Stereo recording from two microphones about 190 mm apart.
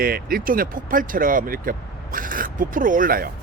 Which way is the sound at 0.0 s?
50° right (ahead or behind).